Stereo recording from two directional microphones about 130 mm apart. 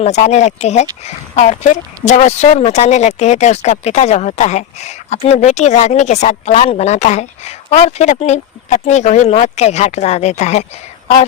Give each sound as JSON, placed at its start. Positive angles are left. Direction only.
{"t": 0.0, "sound": "speech", "side_deg": 60}